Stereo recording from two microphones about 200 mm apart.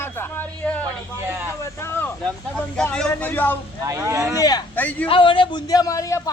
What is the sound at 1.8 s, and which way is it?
Speech, 10° left (ahead or behind).